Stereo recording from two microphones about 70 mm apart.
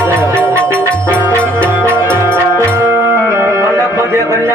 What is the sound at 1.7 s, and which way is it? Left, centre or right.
Music, right.